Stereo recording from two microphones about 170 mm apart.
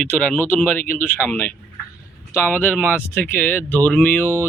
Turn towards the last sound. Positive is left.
turn(degrees=15)  # may be behind; listen again after turning